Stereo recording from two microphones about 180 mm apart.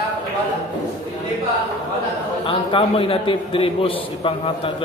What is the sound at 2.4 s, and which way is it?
A man's voice, 30° left (ahead or behind).